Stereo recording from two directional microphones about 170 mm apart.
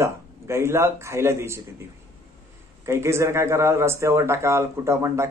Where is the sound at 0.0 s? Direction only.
15° right (ahead or behind).